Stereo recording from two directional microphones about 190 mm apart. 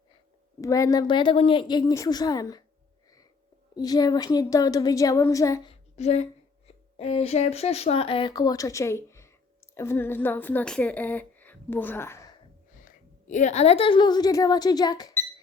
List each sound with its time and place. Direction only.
0.6 s speech: 15° left (ahead or behind)
3.8 s speech: 20° left (ahead or behind)
6.0 s a woman's voice: 35° left (ahead or behind); by 12.3 s 15° left (ahead or behind)
12.8 s a woman's voice: 40° left (ahead or behind); by 15.1 s 20° left (ahead or behind)